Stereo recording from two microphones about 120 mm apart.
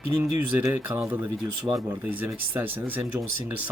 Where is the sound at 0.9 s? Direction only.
25° right (ahead or behind).